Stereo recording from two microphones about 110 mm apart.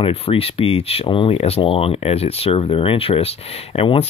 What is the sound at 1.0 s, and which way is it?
Speech, 50° left (ahead or behind).